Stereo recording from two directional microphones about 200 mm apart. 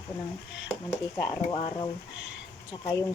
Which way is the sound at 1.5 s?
25° left (ahead or behind).